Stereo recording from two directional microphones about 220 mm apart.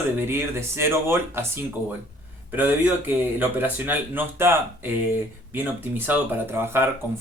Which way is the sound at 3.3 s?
10° right (ahead or behind).